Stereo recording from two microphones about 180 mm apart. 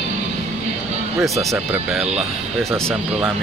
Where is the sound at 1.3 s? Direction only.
15° right (ahead or behind).